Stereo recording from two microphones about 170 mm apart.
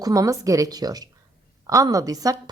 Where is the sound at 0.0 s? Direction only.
20° right (ahead or behind).